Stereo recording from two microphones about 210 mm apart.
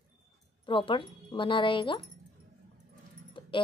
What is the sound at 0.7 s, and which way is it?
A woman's voice, 25° left (ahead or behind).